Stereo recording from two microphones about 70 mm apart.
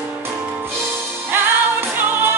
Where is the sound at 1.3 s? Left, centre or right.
Right.